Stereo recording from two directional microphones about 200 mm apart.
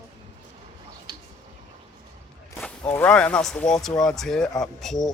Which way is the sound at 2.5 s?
10° left (ahead or behind).